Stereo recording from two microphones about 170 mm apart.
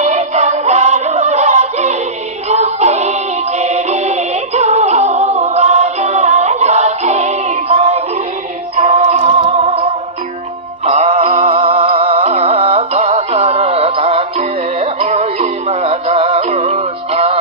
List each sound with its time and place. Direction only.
0.0 s music: 40° right (ahead or behind)
10.9 s music: 40° right (ahead or behind)